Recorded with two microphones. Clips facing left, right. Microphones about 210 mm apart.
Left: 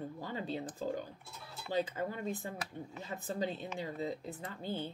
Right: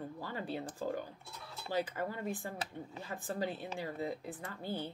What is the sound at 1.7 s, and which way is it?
Speech, 20° left (ahead or behind).